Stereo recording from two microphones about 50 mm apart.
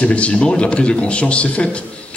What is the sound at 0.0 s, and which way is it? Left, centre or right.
A man's voice, left.